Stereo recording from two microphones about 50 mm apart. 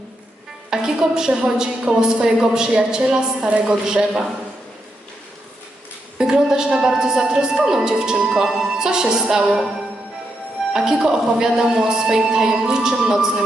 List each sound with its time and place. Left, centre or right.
0.7 s a woman's voice: centre
6.1 s a woman's voice: centre
10.7 s a woman's voice: centre